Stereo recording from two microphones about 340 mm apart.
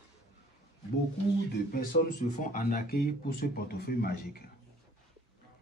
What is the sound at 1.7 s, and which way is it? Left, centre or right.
Speech, left.